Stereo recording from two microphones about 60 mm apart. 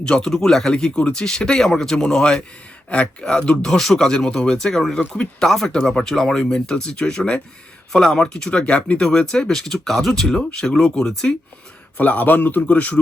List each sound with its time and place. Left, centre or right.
0.0 s speech: centre
4.9 s a man's voice: centre
5.5 s speech: centre
11.9 s a man's voice: left